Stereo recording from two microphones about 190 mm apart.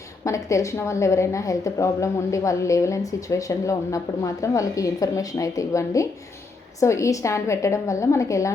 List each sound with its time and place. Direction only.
0.3 s a woman's voice: 15° left (ahead or behind)